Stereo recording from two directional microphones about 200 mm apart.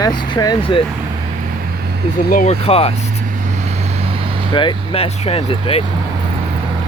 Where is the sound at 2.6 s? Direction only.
30° left (ahead or behind).